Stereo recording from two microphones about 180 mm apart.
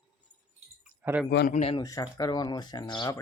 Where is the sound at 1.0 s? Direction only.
10° right (ahead or behind).